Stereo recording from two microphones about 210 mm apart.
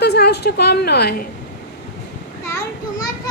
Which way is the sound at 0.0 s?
50° left (ahead or behind).